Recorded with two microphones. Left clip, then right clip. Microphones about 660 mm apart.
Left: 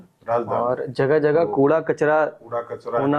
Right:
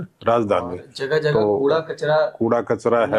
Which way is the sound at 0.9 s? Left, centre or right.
Left.